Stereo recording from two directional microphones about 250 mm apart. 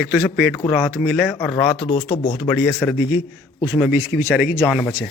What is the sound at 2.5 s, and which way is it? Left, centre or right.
A man's voice, centre.